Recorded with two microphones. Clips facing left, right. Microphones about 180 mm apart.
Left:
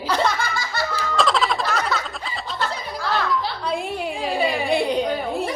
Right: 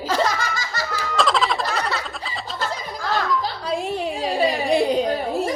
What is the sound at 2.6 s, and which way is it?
Music, 45° right (ahead or behind).